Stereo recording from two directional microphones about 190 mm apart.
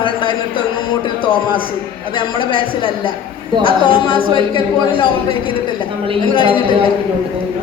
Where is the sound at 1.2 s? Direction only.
25° left (ahead or behind).